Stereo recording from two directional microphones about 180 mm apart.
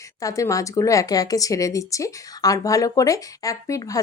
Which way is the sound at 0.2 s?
20° left (ahead or behind).